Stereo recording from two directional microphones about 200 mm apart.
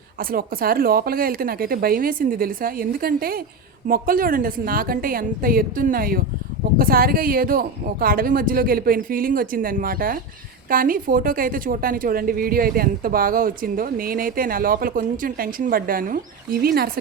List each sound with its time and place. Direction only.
0.2 s a woman's voice: 45° right (ahead or behind)